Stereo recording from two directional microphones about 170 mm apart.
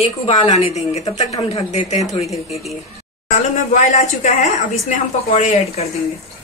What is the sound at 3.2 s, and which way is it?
A woman's voice, 45° left (ahead or behind).